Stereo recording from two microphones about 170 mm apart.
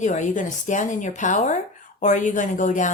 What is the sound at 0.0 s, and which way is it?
A woman's voice, 45° left (ahead or behind).